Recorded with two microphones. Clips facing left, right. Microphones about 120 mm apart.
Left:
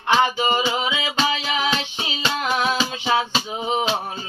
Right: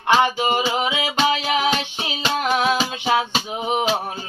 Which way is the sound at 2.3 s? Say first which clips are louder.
Right 3 dB; 50° right (ahead or behind).